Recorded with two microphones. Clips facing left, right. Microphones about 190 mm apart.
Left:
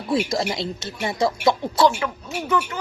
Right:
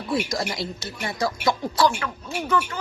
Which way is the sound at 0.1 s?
25° left (ahead or behind).